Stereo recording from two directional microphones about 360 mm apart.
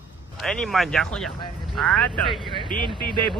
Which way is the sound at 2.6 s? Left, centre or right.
Centre.